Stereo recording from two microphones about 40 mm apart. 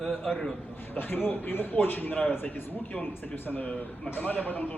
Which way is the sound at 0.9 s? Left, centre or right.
Left.